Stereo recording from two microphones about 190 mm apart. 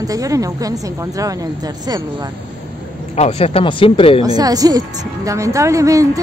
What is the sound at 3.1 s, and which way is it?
Speech, 35° left (ahead or behind).